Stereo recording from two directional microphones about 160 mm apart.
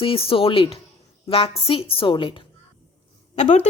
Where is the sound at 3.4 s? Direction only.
40° left (ahead or behind).